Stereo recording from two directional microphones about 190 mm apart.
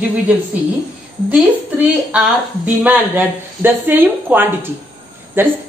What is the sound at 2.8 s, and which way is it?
A woman's voice, 10° right (ahead or behind).